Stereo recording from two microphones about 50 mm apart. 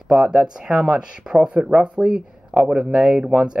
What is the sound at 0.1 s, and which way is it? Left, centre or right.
Speech, right.